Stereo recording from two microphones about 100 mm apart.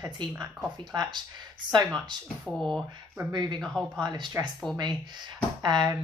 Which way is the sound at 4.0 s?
45° right (ahead or behind).